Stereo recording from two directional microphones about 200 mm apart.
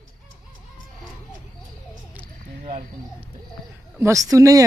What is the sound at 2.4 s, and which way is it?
Cricket, 40° right (ahead or behind).